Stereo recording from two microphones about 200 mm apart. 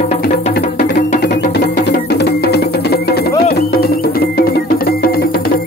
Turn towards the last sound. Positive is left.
turn(degrees=50)  # may be behind; listen again after turning